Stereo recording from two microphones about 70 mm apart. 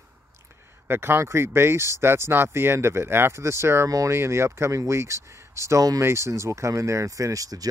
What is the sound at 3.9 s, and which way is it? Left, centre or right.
Speech, right.